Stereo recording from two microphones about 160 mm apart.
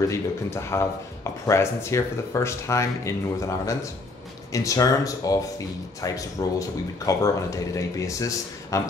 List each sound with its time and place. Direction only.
0.0 s speech: 20° left (ahead or behind)